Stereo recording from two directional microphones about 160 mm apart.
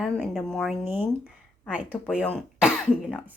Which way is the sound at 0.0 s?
Centre (ahead or behind).